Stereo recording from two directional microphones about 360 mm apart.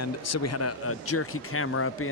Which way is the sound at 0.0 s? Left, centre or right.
Left.